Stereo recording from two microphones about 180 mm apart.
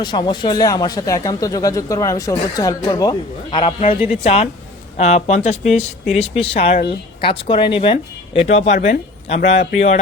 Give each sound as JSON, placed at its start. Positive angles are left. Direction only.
{"t": 0.0, "sound": "speech", "side_deg": 25}